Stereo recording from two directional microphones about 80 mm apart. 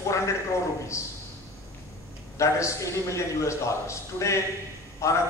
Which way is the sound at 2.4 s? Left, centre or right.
Left.